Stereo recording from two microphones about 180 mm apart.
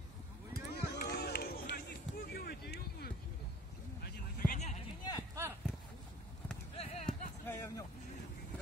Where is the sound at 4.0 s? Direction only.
50° left (ahead or behind).